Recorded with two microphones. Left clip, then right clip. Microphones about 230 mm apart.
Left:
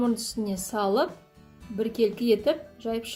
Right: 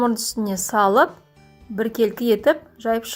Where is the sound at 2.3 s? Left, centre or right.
Right.